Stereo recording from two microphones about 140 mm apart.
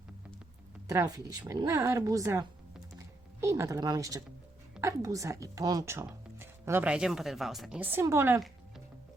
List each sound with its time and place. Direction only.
0.9 s a woman's voice: 25° right (ahead or behind); by 7.8 s centre (ahead or behind)
7.8 s a woman's voice: 15° right (ahead or behind)